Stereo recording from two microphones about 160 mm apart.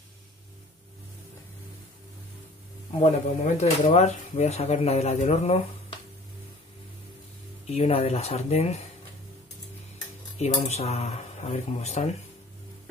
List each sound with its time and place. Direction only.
3.0 s speech: 40° left (ahead or behind)
7.6 s speech: 40° left (ahead or behind)
10.4 s speech: 45° left (ahead or behind)